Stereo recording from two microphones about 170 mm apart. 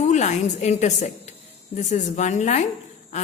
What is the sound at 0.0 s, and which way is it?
A woman's voice, 45° left (ahead or behind).